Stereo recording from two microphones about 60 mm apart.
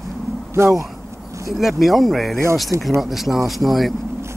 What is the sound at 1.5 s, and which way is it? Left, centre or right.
Speech, centre.